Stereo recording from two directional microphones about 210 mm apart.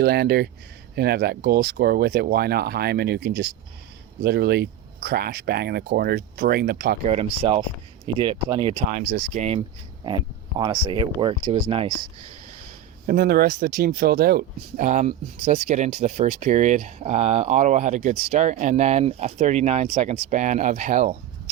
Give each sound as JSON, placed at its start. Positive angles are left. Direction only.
{"t": 0.0, "sound": "speech", "side_deg": -50}
{"t": 7.0, "sound": "speech", "side_deg": -30}
{"t": 9.3, "sound": "speech", "side_deg": -35}
{"t": 10.6, "sound": "speech", "side_deg": -20}
{"t": 13.1, "sound": "speech", "side_deg": -45}